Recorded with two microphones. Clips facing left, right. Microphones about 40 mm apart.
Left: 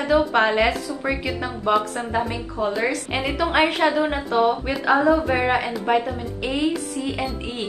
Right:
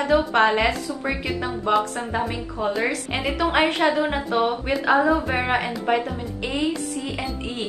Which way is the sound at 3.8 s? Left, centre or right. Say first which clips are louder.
Left 1 dB; left.